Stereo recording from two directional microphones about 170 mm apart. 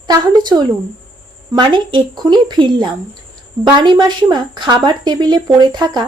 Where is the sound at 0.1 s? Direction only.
25° right (ahead or behind).